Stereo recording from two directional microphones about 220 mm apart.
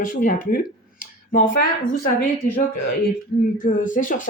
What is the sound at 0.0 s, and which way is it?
Speech, 35° left (ahead or behind).